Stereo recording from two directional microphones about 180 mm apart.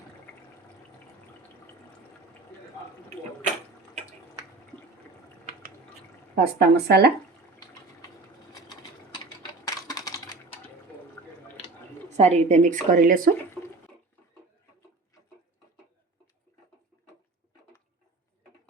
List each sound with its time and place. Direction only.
6.3 s speech: 65° right (ahead or behind)
7.6 s a sound: 20° left (ahead or behind)
9.6 s typing: 20° left (ahead or behind)
12.1 s speech: 35° right (ahead or behind)